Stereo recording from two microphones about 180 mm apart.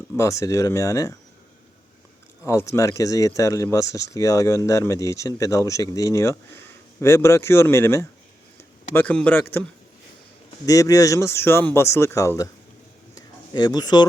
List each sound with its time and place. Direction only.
0.2 s speech: 15° left (ahead or behind)
2.5 s speech: 15° left (ahead or behind)
10.7 s speech: 20° left (ahead or behind)
13.1 s a sound: 20° left (ahead or behind)